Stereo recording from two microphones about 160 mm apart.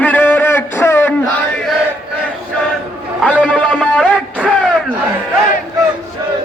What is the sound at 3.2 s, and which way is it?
Speech, 10° left (ahead or behind).